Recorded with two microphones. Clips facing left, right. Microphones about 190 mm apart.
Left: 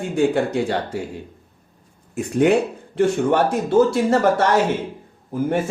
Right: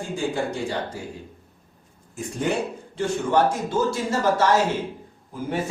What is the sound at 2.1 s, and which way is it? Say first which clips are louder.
Speech: left 9 dB; 65° left (ahead or behind).